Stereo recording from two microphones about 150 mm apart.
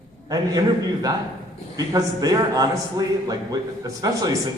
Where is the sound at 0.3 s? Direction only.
25° right (ahead or behind).